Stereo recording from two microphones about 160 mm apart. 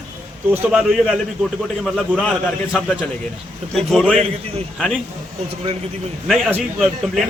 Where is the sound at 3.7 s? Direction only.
Centre (ahead or behind).